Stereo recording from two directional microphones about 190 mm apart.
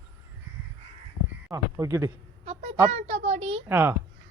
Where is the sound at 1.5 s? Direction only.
15° right (ahead or behind).